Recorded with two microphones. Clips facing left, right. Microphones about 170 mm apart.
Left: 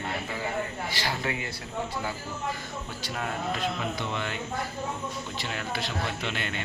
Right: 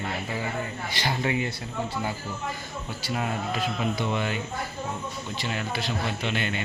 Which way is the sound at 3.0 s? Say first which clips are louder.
Right 3 dB; 10° right (ahead or behind).